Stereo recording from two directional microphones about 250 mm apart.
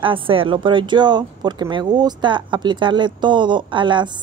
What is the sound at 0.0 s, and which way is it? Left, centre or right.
A woman's voice, right.